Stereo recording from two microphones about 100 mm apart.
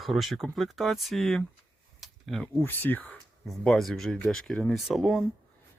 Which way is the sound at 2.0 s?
Centre (ahead or behind).